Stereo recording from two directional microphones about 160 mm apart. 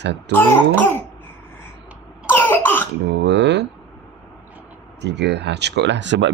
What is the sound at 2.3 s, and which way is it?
Cough, 15° left (ahead or behind).